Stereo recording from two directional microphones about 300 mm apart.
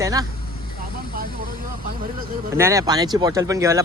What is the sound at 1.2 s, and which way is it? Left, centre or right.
Vehicle, right.